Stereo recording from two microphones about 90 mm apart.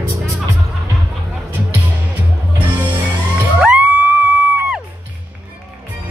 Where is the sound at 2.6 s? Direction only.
20° right (ahead or behind).